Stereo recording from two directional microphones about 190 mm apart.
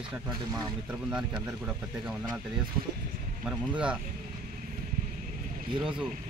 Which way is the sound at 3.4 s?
5° right (ahead or behind).